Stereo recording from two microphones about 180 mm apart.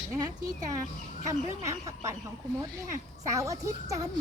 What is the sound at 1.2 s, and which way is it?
A woman's voice, 20° right (ahead or behind).